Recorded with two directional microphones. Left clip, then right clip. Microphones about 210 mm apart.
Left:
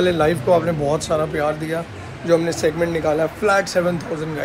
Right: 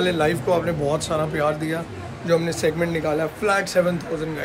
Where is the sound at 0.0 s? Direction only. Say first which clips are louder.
Left 3 dB; 5° right (ahead or behind).